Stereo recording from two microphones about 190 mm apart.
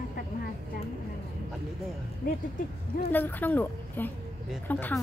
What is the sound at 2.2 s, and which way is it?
Speech, 45° left (ahead or behind).